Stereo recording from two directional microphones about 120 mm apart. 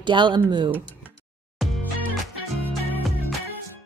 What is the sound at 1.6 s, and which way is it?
Music, centre (ahead or behind).